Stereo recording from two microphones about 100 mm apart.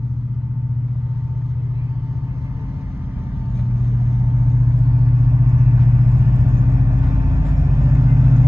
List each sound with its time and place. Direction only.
3.8 s vehicle: 30° right (ahead or behind)
4.8 s vehicle: 45° right (ahead or behind)